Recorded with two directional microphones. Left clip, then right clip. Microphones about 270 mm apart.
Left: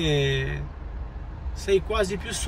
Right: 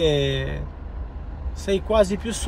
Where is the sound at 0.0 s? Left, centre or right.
Centre.